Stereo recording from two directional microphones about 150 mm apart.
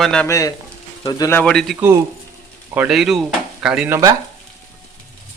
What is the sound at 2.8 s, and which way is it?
Speech, 5° right (ahead or behind).